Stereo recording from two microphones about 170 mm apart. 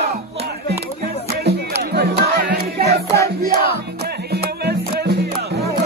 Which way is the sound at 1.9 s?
65° right (ahead or behind).